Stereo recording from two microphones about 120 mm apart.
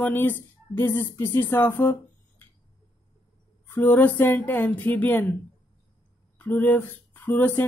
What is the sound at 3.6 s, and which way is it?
Speech, 15° left (ahead or behind).